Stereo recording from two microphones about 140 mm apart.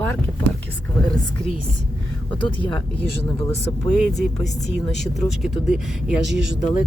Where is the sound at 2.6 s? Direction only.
10° left (ahead or behind).